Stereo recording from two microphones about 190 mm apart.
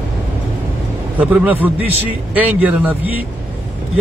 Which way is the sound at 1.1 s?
10° right (ahead or behind).